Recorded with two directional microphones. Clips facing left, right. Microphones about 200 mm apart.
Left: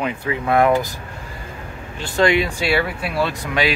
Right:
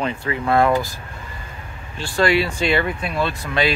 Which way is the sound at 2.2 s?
20° left (ahead or behind).